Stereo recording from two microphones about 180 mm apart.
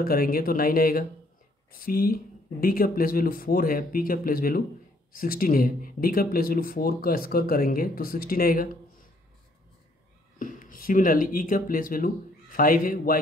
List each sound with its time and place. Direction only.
0.0 s speech: 55° left (ahead or behind)
10.4 s speech: 50° left (ahead or behind)